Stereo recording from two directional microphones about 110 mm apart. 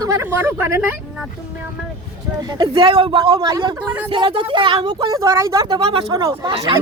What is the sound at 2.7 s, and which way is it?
Speech, 50° right (ahead or behind).